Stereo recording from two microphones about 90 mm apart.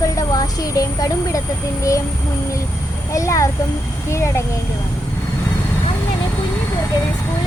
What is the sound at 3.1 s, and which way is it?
Speech, 35° left (ahead or behind).